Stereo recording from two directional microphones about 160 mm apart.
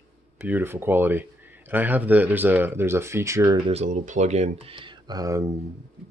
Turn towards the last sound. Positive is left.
turn(degrees=-20)  # may be behind; listen again after turning